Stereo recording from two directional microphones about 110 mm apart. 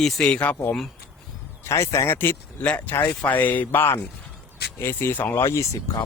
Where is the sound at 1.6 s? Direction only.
25° left (ahead or behind).